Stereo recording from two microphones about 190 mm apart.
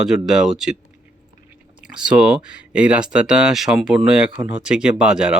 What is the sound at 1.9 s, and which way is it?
Speech, 5° right (ahead or behind).